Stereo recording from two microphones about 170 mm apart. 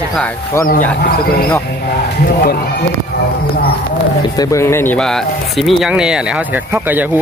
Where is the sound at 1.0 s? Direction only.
60° left (ahead or behind).